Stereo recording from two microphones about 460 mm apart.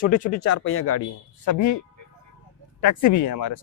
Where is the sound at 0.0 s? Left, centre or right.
Centre.